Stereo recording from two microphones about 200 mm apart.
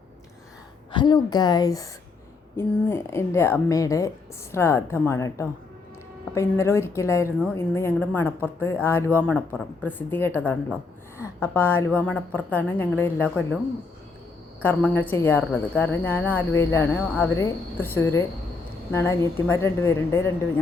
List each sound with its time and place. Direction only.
0.9 s a woman's voice: 25° left (ahead or behind)
14.6 s a woman's voice: 10° left (ahead or behind)